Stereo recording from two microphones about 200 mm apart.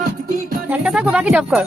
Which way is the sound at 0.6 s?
5° right (ahead or behind).